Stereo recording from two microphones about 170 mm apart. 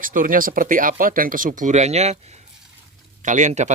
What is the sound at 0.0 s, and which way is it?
Speech, 55° right (ahead or behind).